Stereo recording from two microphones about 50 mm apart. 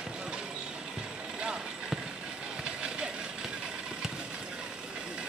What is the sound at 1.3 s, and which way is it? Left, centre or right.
Vehicle, centre.